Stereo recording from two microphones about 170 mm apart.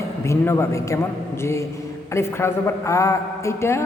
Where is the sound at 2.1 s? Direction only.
15° left (ahead or behind).